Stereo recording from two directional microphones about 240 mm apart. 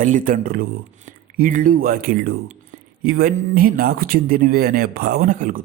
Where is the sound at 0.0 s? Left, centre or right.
Right.